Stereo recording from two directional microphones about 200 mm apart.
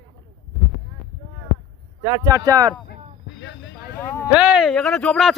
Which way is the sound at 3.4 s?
65° left (ahead or behind).